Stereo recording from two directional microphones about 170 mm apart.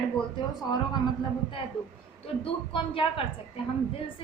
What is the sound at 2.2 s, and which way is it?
A woman's voice, 30° left (ahead or behind).